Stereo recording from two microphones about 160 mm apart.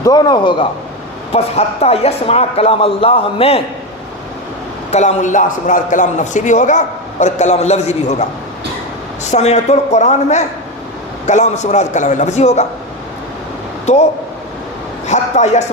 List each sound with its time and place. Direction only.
0.0 s a man's voice: 25° left (ahead or behind)
1.3 s a man's voice: 40° left (ahead or behind)
4.9 s a man's voice: 45° left (ahead or behind)
9.2 s a man's voice: 45° left (ahead or behind)
15.0 s a man's voice: 45° left (ahead or behind)